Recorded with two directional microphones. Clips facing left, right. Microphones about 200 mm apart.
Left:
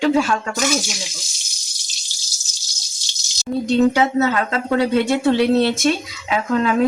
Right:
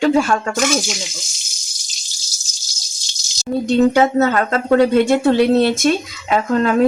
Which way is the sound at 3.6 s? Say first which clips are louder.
Right 2 dB; 50° right (ahead or behind).